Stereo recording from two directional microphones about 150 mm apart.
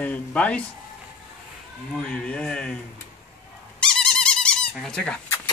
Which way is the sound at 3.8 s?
5° left (ahead or behind).